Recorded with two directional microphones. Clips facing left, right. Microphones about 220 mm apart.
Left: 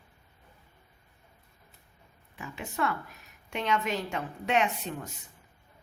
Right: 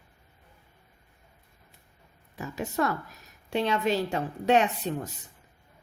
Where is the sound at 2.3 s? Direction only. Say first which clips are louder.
Right 7 dB; 40° right (ahead or behind).